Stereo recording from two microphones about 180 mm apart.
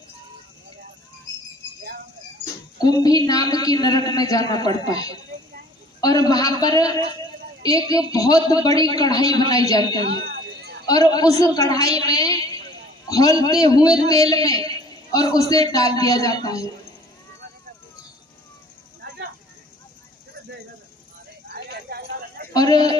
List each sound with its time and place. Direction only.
2.4 s speech: 20° left (ahead or behind)
10.3 s a sound: 65° right (ahead or behind)
10.8 s a man's voice: 20° left (ahead or behind)
21.4 s clip-clop: 60° right (ahead or behind)
22.5 s speech: 20° left (ahead or behind)